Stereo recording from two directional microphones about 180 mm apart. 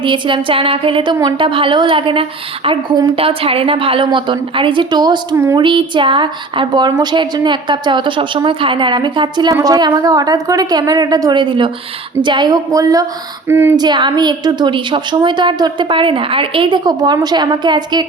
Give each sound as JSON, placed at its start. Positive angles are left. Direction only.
{"t": 0.0, "sound": "a woman's voice", "side_deg": -25}
{"t": 13.7, "sound": "a woman's voice", "side_deg": -25}